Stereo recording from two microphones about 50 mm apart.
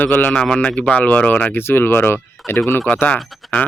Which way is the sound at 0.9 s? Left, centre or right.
Left.